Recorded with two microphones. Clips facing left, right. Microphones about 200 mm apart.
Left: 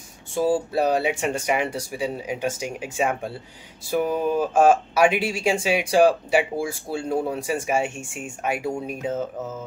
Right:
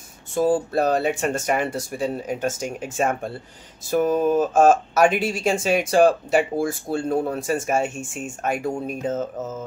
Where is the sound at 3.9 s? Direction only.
45° right (ahead or behind).